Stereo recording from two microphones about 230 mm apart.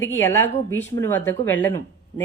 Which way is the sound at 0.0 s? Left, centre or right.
Centre.